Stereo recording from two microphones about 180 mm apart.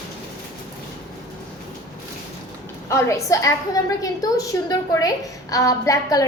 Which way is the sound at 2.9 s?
15° left (ahead or behind).